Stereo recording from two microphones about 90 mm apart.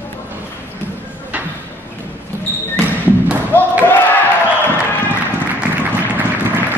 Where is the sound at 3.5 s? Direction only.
25° left (ahead or behind).